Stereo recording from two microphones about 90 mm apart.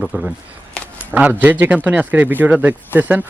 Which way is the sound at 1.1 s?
20° right (ahead or behind).